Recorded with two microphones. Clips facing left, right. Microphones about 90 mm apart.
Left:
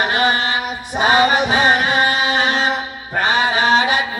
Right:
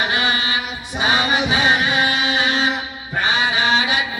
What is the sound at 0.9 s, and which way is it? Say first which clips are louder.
Music: left 5 dB; 45° left (ahead or behind).